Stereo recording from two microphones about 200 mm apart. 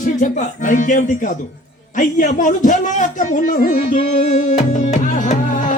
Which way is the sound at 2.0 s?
40° left (ahead or behind).